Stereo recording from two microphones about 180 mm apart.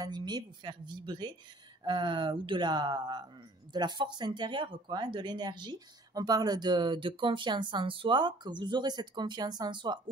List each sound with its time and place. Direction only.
0.0 s speech: 25° right (ahead or behind)